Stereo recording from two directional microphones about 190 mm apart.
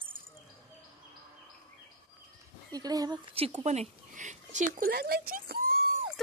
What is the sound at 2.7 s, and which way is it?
Speech, 20° right (ahead or behind).